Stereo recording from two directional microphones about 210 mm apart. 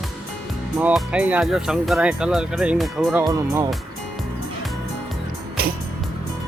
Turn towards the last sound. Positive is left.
turn(degrees=-45)  # may be behind; listen again after turning